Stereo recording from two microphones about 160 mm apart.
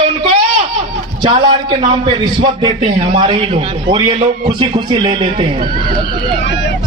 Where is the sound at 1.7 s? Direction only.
30° right (ahead or behind).